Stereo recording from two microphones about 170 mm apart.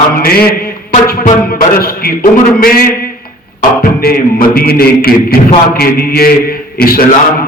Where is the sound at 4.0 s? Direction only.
60° left (ahead or behind).